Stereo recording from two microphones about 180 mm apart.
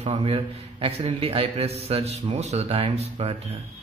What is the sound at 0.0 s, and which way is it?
A man's voice, 30° right (ahead or behind).